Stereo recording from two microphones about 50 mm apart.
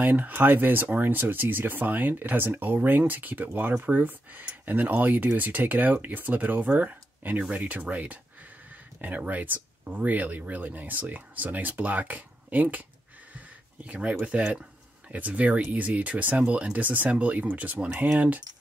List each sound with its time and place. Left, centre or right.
0.0 s speech: right